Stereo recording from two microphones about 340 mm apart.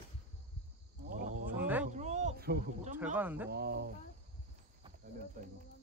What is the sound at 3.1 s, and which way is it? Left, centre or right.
Speech, centre.